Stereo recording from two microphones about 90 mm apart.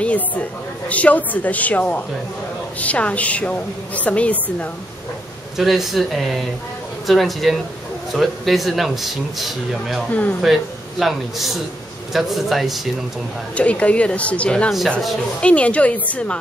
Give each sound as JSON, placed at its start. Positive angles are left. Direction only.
{"t": 0.0, "sound": "a woman's voice", "side_deg": 15}
{"t": 5.6, "sound": "speech", "side_deg": 0}
{"t": 13.6, "sound": "a woman's voice", "side_deg": 15}